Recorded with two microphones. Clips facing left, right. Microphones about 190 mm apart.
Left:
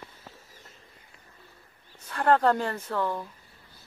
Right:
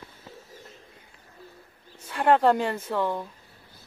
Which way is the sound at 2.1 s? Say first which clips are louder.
Right 2 dB; 20° right (ahead or behind).